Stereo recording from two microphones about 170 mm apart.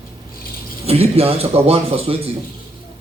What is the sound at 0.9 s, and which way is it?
Speech, 35° right (ahead or behind).